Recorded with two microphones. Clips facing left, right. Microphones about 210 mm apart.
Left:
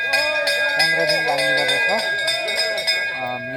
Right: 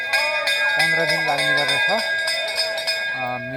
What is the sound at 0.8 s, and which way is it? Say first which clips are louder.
Cowbell: left 1 dB; 20° left (ahead or behind).